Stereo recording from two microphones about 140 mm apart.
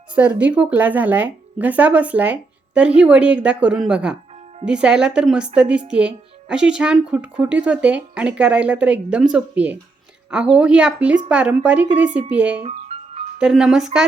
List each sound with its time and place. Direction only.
0.2 s speech: 10° right (ahead or behind)
12.6 s music: 45° right (ahead or behind)
13.4 s speech: 5° right (ahead or behind)